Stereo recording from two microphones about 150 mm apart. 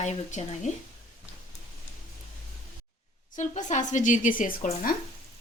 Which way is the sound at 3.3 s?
55° left (ahead or behind).